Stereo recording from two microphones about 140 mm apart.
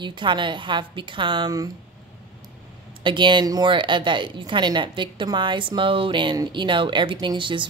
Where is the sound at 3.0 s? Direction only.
35° right (ahead or behind).